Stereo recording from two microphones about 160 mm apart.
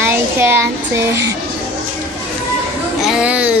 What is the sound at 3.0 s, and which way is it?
Speech, 5° right (ahead or behind).